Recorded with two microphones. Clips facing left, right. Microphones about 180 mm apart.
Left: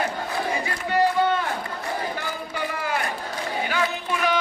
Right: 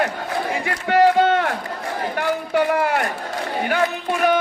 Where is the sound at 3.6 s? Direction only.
50° right (ahead or behind).